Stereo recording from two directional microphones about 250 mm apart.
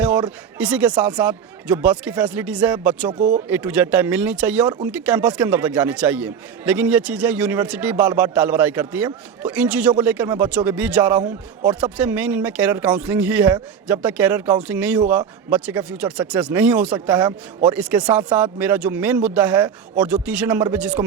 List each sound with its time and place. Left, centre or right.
0.3 s a man's voice: centre
3.2 s speech: right
3.5 s a man's voice: centre
17.2 s a man's voice: centre
17.7 s a man's voice: centre